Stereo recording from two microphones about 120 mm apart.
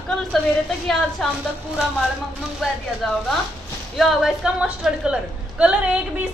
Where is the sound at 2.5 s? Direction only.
Centre (ahead or behind).